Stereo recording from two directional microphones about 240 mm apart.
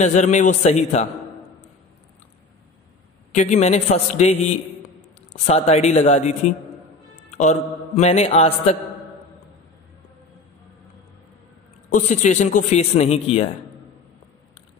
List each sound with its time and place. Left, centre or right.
0.0 s a man's voice: left
3.3 s a man's voice: left
11.9 s a man's voice: left